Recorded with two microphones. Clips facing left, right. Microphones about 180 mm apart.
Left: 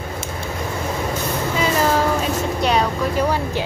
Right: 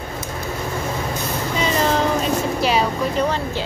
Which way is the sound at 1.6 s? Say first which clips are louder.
Left 1 dB; 5° left (ahead or behind).